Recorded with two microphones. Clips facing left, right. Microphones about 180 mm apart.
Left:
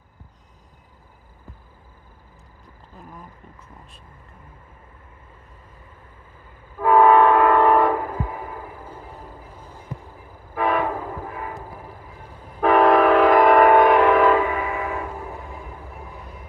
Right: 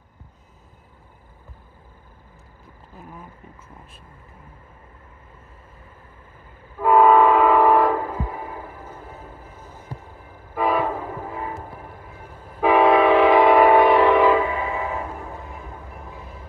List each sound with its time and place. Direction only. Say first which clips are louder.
3.0 s speech: right 1 dB; 5° right (ahead or behind)
6.8 s train: even; centre (ahead or behind)
10.5 s train: even; 5° right (ahead or behind)
12.5 s train: even; 5° right (ahead or behind)
14.5 s train: even; 25° right (ahead or behind)